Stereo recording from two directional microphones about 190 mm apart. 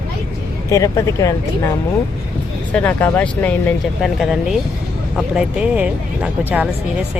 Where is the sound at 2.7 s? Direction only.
5° left (ahead or behind).